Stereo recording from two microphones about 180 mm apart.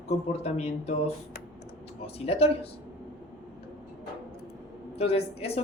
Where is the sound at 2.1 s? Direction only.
35° left (ahead or behind).